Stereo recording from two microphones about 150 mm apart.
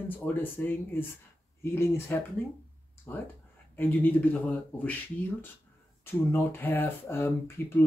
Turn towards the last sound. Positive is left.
turn(degrees=15)  # may be behind; listen again after turning